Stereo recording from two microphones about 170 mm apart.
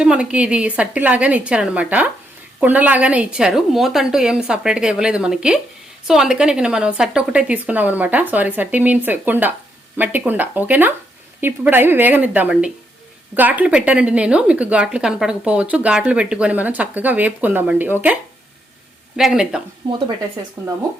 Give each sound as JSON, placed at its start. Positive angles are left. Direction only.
{"t": 0.0, "sound": "a woman's voice", "side_deg": -5}
{"t": 19.1, "sound": "a woman's voice", "side_deg": -5}
{"t": 19.8, "sound": "speech", "side_deg": -30}
{"t": 20.6, "sound": "speech", "side_deg": -20}